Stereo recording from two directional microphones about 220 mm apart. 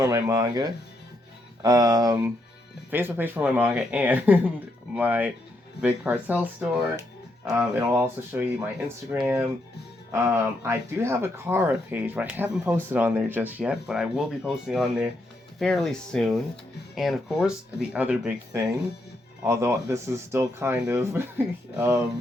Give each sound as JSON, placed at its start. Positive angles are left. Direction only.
{"t": 0.0, "sound": "speech", "side_deg": -15}